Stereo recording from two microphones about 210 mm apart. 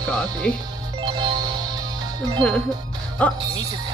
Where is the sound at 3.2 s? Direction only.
5° left (ahead or behind).